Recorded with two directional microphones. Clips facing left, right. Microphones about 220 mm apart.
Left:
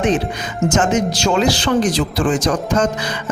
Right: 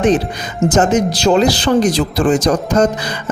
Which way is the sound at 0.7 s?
35° right (ahead or behind).